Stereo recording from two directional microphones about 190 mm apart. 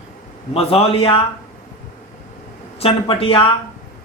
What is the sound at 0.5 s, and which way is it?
Speech, 30° left (ahead or behind).